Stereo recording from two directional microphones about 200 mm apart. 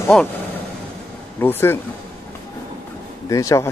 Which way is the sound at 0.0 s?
5° left (ahead or behind).